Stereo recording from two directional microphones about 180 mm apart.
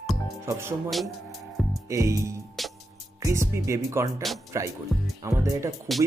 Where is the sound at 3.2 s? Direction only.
15° right (ahead or behind).